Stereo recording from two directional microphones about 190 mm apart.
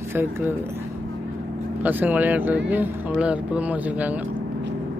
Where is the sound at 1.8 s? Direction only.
10° right (ahead or behind).